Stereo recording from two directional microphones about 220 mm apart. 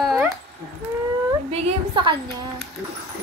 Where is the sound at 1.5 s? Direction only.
25° right (ahead or behind).